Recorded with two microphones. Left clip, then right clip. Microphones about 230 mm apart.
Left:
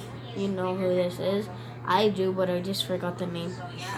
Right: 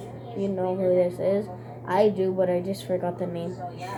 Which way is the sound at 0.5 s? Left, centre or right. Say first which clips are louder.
Right 4 dB; left.